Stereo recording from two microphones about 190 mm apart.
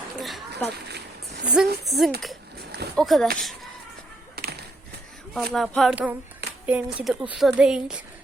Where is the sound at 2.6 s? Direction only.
60° right (ahead or behind).